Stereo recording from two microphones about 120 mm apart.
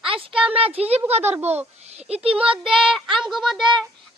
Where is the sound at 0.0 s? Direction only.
50° right (ahead or behind).